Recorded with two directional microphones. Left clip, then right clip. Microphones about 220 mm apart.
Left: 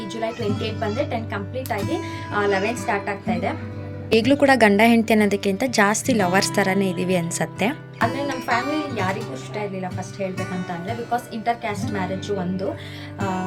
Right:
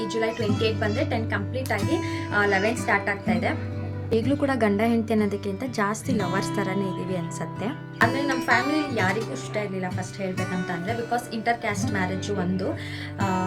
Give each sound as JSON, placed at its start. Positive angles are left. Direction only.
{"t": 0.0, "sound": "speech", "side_deg": 0}
{"t": 4.1, "sound": "a woman's voice", "side_deg": 15}
{"t": 7.9, "sound": "speech", "side_deg": 0}
{"t": 13.1, "sound": "music", "side_deg": 0}